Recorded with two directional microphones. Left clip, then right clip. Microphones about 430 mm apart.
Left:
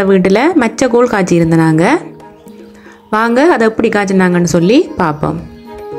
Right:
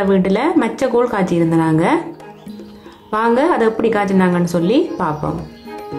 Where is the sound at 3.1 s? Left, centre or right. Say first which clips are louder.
Left 5 dB; centre.